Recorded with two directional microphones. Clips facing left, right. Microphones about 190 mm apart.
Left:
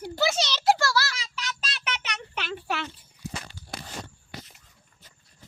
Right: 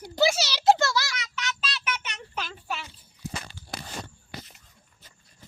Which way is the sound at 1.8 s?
70° left (ahead or behind).